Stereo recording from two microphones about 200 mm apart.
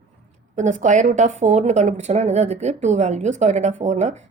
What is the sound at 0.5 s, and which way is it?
A woman's voice, 35° right (ahead or behind).